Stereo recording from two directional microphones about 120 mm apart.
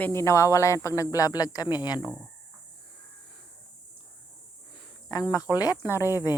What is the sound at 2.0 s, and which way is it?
Speech, 5° right (ahead or behind).